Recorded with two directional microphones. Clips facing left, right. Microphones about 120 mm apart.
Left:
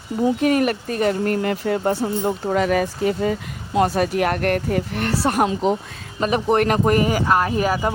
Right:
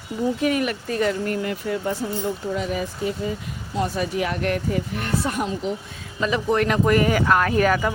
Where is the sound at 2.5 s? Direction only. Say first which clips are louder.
Left 7 dB; 75° left (ahead or behind).